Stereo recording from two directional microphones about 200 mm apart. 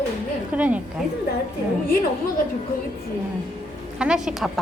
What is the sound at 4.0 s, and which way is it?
Speech, 5° right (ahead or behind).